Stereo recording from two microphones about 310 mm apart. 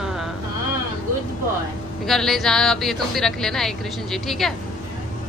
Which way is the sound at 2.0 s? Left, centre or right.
Centre.